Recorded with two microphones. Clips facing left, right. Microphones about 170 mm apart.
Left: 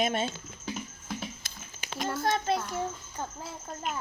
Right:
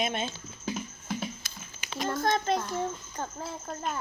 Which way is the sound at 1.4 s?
45° left (ahead or behind).